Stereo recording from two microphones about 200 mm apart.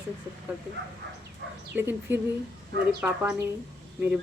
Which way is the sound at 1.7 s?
10° right (ahead or behind).